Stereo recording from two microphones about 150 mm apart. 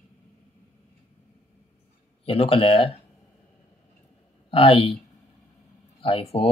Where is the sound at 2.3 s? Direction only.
40° left (ahead or behind).